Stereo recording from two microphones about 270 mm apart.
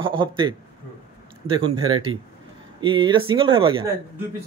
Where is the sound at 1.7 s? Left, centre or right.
Right.